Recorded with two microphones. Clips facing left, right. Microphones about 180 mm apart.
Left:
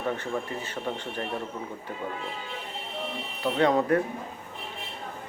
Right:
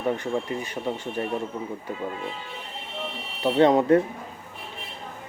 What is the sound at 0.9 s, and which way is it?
Speech, 10° right (ahead or behind).